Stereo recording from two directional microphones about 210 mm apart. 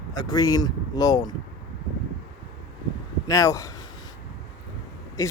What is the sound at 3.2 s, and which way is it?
Speech, 15° left (ahead or behind).